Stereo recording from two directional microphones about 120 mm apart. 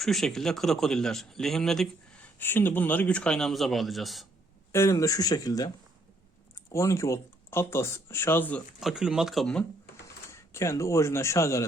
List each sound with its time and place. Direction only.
0.0 s speech: centre (ahead or behind)
4.7 s speech: 25° left (ahead or behind)
8.8 s speech: 5° right (ahead or behind)
10.3 s speech: 25° left (ahead or behind)